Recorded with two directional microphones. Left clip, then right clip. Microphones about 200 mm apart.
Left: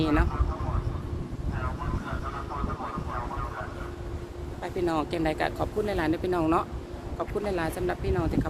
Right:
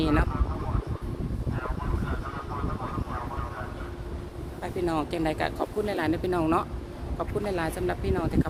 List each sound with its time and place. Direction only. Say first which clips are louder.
0.0 s speech: even; 10° right (ahead or behind)
4.6 s speech: left 1 dB; 5° right (ahead or behind)